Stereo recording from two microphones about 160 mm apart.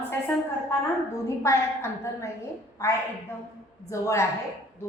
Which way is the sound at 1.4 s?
15° left (ahead or behind).